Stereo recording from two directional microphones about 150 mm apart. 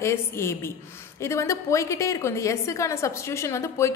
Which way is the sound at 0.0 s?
15° left (ahead or behind).